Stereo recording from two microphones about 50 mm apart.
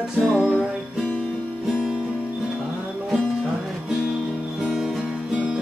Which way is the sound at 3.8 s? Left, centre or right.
Centre.